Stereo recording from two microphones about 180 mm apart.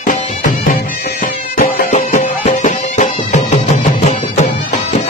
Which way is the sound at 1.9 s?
45° left (ahead or behind).